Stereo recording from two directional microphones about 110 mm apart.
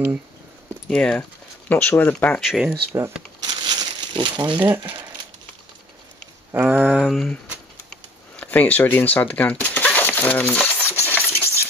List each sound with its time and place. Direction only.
0.8 s speech: 10° left (ahead or behind)
2.3 s speech: centre (ahead or behind)
3.4 s crumpling: 40° right (ahead or behind)
4.4 s speech: 40° right (ahead or behind)
6.5 s a sound: 15° right (ahead or behind)
7.1 s speech: 5° left (ahead or behind)
7.9 s a sound: 15° left (ahead or behind)